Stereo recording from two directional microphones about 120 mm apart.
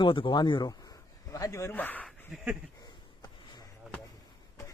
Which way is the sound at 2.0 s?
5° right (ahead or behind).